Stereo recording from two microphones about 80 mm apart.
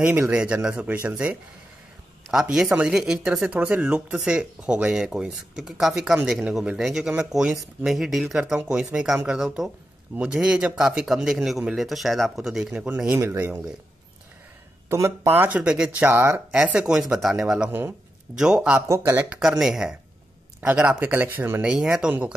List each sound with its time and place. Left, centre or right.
0.3 s speech: centre
2.5 s speech: centre
14.9 s speech: right
15.5 s speech: centre
16.1 s speech: right
16.6 s speech: centre
17.6 s speech: right
18.3 s speech: centre
18.8 s speech: right
19.6 s speech: centre; by 21.6 s right
21.6 s speech: centre